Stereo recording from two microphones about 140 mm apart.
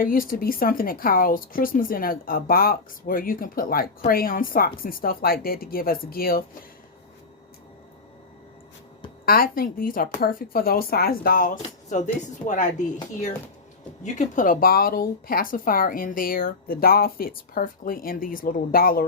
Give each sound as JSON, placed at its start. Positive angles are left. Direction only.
{"t": 0.0, "sound": "speech", "side_deg": 90}
{"t": 9.2, "sound": "speech", "side_deg": 90}
{"t": 11.6, "sound": "speech", "side_deg": 60}
{"t": 14.0, "sound": "speech", "side_deg": 65}